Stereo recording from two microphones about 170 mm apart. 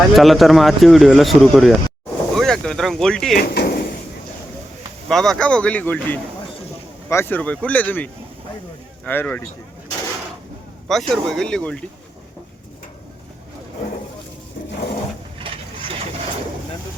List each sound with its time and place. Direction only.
0.1 s speech: centre (ahead or behind)
3.3 s speech: 70° left (ahead or behind)
5.0 s speech: centre (ahead or behind)
10.8 s speech: centre (ahead or behind)